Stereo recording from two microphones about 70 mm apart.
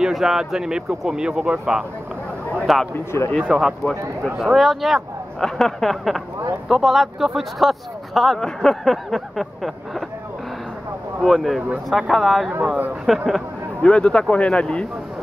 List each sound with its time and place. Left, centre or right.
0.0 s speech: centre
2.6 s speech: centre
2.9 s speech: left
3.4 s speech: centre
11.1 s speech: centre
13.8 s speech: centre